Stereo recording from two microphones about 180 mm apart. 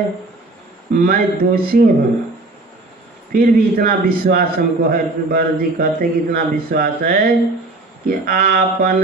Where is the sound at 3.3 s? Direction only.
50° right (ahead or behind).